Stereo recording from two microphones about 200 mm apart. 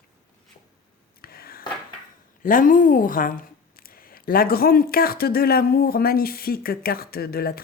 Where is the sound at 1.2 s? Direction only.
50° left (ahead or behind).